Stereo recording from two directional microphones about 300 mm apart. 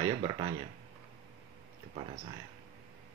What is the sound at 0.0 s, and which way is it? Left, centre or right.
Speech, centre.